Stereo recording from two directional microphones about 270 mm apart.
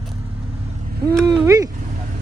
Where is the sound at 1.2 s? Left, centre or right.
Centre.